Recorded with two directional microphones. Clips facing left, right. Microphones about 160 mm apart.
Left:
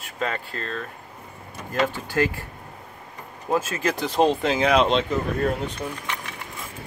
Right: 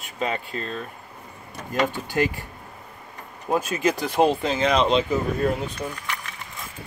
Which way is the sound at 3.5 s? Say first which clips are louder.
Right 1 dB; 15° right (ahead or behind).